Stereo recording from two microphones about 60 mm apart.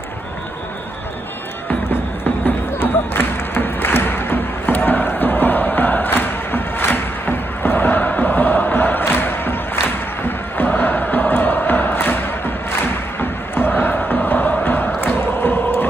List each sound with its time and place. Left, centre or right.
2.4 s music: left